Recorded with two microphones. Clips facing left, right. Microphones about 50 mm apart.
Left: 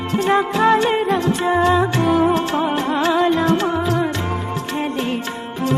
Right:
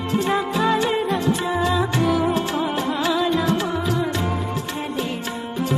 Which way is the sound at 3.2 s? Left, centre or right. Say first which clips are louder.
Left 4 dB; left.